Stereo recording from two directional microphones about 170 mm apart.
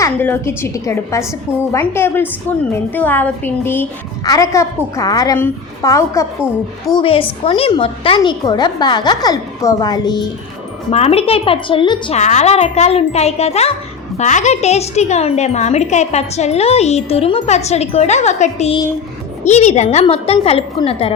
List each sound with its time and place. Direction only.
0.0 s a woman's voice: 15° left (ahead or behind)
6.9 s a woman's voice: 30° left (ahead or behind)
10.9 s speech: 35° left (ahead or behind)
12.2 s speech: 45° left (ahead or behind)